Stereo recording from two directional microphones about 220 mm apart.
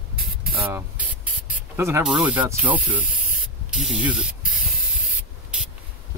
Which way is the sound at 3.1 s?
35° left (ahead or behind).